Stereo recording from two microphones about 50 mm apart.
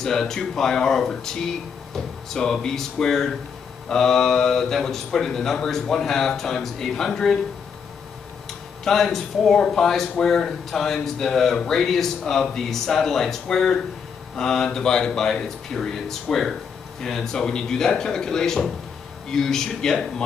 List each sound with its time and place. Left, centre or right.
0.0 s speech: centre
8.8 s speech: centre